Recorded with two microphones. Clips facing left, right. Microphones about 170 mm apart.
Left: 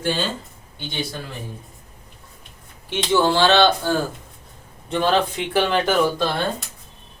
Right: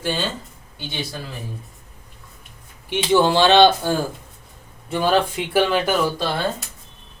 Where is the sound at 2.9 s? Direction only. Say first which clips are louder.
Right 2 dB; 15° right (ahead or behind).